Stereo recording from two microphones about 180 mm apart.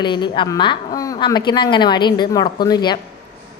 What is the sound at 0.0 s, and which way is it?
A woman's voice, 25° left (ahead or behind).